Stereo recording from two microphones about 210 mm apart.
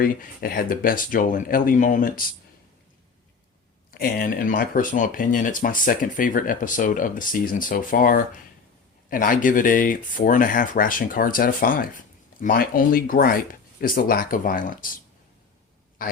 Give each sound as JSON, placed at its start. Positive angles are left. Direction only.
{"t": 0.0, "sound": "speech", "side_deg": 45}
{"t": 3.9, "sound": "speech", "side_deg": 45}
{"t": 16.0, "sound": "a sound", "side_deg": 40}